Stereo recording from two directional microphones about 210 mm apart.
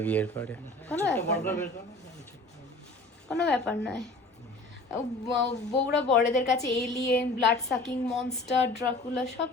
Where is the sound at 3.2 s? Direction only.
5° left (ahead or behind).